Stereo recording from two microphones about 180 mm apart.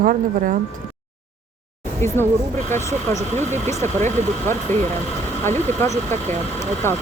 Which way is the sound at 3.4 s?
40° right (ahead or behind).